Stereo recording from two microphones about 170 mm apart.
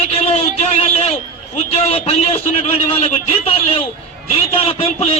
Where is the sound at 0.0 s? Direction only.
35° left (ahead or behind).